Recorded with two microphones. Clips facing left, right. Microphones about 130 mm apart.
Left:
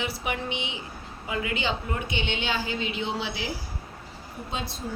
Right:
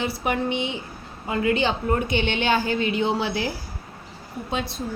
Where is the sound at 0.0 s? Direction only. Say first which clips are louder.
Right 6 dB; 40° right (ahead or behind).